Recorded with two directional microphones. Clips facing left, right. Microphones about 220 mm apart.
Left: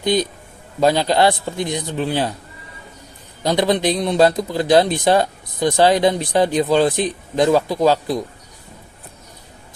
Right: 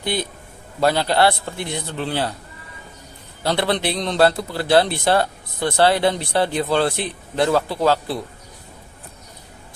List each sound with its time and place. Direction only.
0.0 s a man's voice: 20° left (ahead or behind)
3.4 s a man's voice: 15° left (ahead or behind)